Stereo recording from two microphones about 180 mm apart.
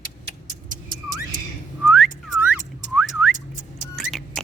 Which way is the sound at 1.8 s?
Centre (ahead or behind).